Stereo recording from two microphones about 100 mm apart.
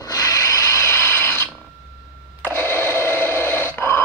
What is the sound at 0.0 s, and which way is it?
Rub, 35° left (ahead or behind).